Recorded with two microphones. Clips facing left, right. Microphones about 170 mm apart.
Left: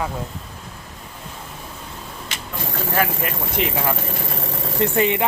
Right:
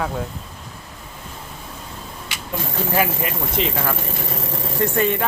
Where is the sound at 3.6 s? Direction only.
60° left (ahead or behind).